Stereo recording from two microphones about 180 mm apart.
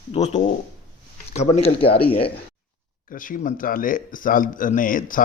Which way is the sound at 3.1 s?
50° left (ahead or behind).